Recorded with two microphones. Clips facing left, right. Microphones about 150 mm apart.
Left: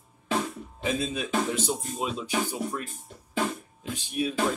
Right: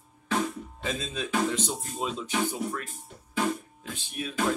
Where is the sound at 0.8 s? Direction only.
10° left (ahead or behind).